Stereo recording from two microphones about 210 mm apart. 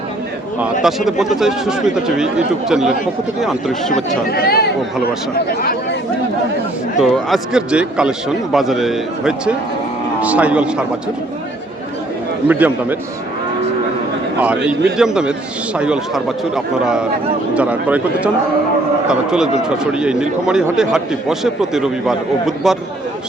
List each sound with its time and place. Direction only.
0.6 s speech: centre (ahead or behind)
4.3 s speech: 45° left (ahead or behind)
7.0 s speech: centre (ahead or behind)
12.5 s speech: 10° right (ahead or behind)
14.4 s speech: 5° right (ahead or behind)